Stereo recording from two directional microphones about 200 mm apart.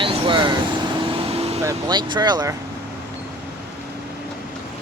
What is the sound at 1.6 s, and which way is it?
Speech, 20° right (ahead or behind).